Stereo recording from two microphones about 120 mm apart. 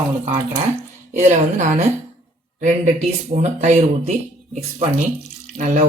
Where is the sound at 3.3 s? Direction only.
75° right (ahead or behind).